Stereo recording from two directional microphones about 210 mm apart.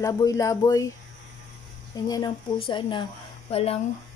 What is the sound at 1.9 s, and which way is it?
A woman's voice, 15° left (ahead or behind).